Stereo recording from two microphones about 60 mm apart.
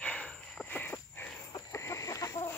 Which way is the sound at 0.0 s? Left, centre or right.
Centre.